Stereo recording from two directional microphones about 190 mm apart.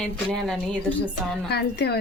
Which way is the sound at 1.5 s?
60° left (ahead or behind).